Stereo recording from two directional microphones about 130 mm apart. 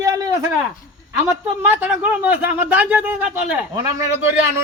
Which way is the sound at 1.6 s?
15° right (ahead or behind).